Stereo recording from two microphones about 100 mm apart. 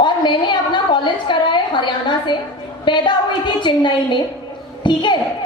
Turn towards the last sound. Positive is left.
turn(degrees=50)  # may be behind; listen again after turning